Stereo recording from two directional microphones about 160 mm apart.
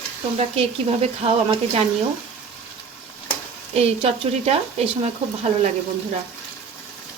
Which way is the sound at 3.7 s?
40° right (ahead or behind).